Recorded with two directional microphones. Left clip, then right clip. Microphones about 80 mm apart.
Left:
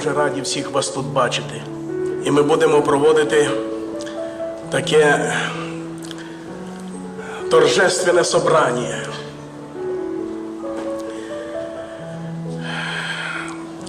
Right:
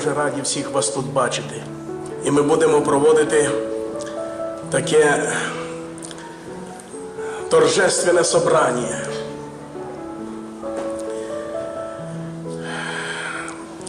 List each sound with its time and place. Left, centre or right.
0.0 s a man's voice: left
7.4 s a man's voice: left
12.7 s music: left